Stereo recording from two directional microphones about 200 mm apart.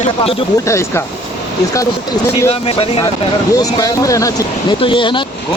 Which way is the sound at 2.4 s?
30° left (ahead or behind).